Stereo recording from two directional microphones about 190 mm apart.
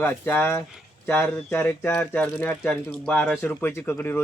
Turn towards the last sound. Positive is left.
turn(degrees=10)  # may be behind; listen again after turning